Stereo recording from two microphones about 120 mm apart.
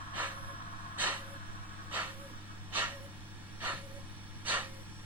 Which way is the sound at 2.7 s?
15° right (ahead or behind).